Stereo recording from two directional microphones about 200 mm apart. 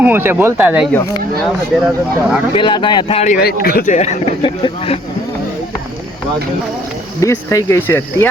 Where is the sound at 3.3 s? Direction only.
50° left (ahead or behind); by 5.0 s 25° left (ahead or behind).